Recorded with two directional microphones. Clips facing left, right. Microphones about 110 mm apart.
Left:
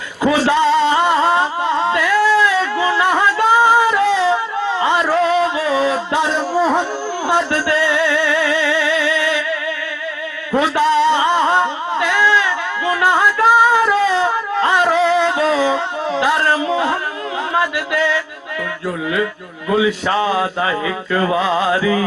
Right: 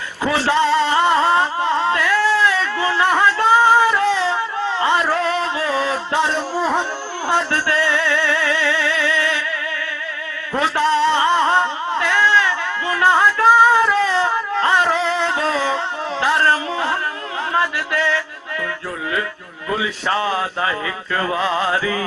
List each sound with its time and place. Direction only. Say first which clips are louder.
0.2 s a man's voice: left 3 dB; 15° left (ahead or behind)
1.9 s music: left 3 dB; 15° left (ahead or behind)
4.8 s a sound: left 3 dB; 15° left (ahead or behind)
7.3 s music: left 2 dB; 15° left (ahead or behind)
10.6 s a sound: left 2 dB; 15° left (ahead or behind)
17.5 s music: left 1 dB; 15° left (ahead or behind)
20.1 s music: left 3 dB; 15° left (ahead or behind)